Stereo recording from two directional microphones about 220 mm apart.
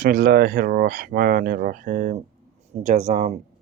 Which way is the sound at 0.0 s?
40° right (ahead or behind).